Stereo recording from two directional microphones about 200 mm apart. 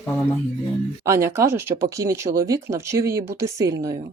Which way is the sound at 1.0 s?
15° right (ahead or behind).